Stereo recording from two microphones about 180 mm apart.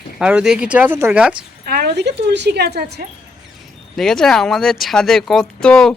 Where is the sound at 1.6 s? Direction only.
60° right (ahead or behind).